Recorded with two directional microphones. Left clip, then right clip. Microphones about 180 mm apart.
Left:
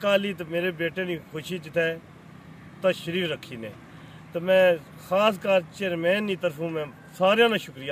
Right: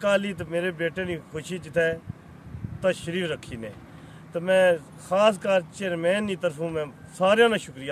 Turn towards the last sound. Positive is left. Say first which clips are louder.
# right 1 dB
turn(degrees=0)  # may be behind; listen again after turning